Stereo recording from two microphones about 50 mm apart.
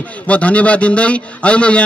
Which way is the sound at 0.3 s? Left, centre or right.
Left.